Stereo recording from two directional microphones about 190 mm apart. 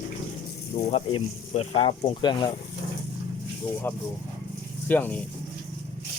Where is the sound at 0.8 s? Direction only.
35° left (ahead or behind).